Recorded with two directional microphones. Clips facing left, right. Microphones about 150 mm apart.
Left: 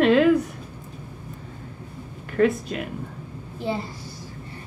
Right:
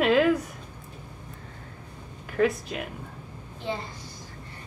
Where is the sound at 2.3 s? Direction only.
Centre (ahead or behind).